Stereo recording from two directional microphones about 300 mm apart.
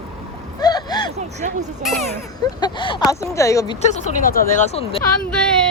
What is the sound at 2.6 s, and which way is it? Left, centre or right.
Speech, centre.